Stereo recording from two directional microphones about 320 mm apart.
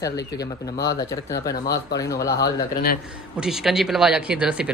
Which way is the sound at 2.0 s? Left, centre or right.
Centre.